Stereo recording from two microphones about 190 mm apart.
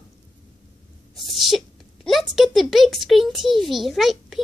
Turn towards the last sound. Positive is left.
turn(degrees=0)  # may be behind; listen again after turning